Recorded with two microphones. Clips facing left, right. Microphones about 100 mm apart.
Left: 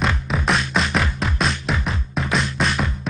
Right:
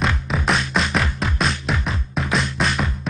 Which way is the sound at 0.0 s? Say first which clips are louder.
Even; centre (ahead or behind).